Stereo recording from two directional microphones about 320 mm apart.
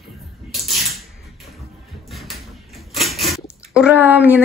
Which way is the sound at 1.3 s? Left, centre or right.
Centre.